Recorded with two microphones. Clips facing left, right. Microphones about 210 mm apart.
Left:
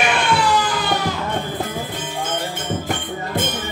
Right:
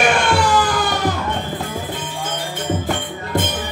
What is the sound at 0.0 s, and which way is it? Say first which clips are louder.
Music: right 2 dB; 45° right (ahead or behind).